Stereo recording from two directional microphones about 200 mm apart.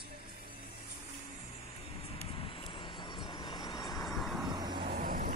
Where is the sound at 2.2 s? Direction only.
25° left (ahead or behind).